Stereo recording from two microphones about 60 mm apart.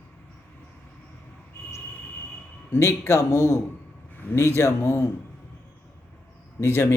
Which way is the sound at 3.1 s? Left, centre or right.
Left.